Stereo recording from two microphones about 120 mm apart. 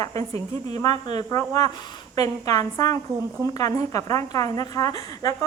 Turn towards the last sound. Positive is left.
turn(degrees=30)  # may be behind; listen again after turning